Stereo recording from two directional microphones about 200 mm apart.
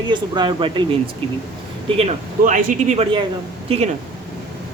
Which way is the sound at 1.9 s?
25° right (ahead or behind).